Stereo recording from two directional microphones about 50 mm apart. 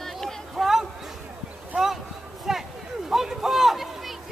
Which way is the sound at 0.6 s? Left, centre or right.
Centre.